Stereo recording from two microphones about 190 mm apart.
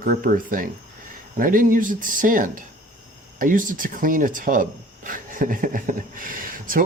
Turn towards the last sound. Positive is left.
turn(degrees=-45)  # may be behind; listen again after turning